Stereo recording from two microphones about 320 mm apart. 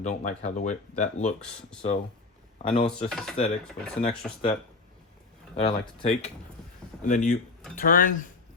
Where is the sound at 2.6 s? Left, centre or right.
Centre.